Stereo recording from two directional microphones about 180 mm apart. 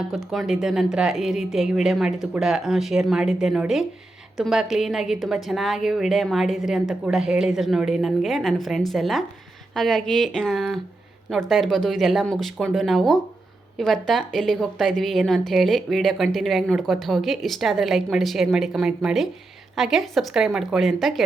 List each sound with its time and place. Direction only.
0.3 s a woman's voice: centre (ahead or behind)